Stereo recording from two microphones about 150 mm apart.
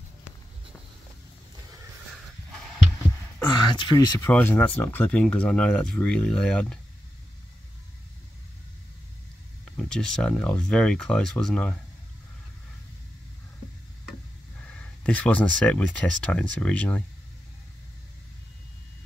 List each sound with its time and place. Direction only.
3.4 s speech: 30° left (ahead or behind)
4.2 s speech: 15° left (ahead or behind)
9.8 s speech: 5° left (ahead or behind)
14.6 s speech: 10° left (ahead or behind)